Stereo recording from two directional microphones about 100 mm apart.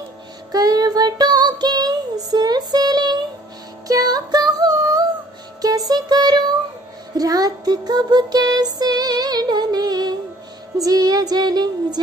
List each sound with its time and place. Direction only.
0.5 s child singing: 40° right (ahead or behind)
3.8 s music: 35° right (ahead or behind)
7.2 s child singing: 40° right (ahead or behind)
10.8 s music: 40° right (ahead or behind)